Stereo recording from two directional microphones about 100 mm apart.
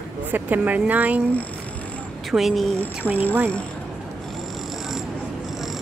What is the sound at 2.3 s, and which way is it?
Speech, centre (ahead or behind).